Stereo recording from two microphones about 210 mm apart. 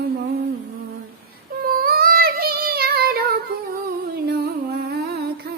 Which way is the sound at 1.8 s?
45° right (ahead or behind).